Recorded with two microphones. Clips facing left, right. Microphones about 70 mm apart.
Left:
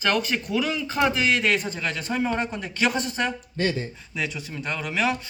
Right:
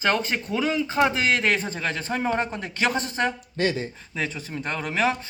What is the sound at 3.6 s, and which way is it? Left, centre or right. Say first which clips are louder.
Speech: right 1 dB; centre.